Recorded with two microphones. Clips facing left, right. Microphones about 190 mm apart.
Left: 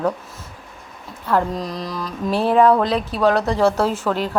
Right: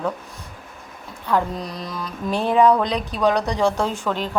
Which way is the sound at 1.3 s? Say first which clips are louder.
Left 2 dB; centre (ahead or behind).